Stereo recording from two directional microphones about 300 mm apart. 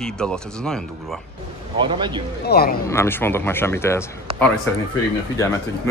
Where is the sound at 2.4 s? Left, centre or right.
Left.